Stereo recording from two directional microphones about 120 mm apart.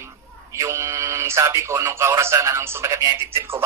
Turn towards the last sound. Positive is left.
turn(degrees=-20)  # may be behind; listen again after turning